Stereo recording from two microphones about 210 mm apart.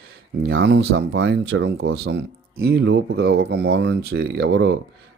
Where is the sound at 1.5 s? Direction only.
75° right (ahead or behind).